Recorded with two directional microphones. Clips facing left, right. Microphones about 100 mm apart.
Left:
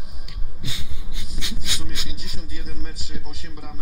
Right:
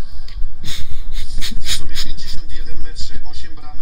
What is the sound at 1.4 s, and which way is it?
Speech, 20° left (ahead or behind).